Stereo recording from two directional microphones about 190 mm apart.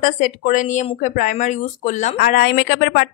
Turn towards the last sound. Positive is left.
turn(degrees=55)  # may be behind; listen again after turning